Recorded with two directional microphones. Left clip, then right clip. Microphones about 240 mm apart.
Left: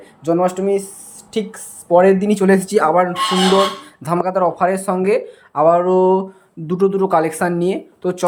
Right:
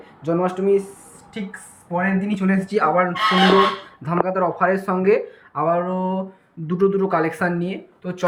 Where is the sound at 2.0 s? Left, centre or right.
Left.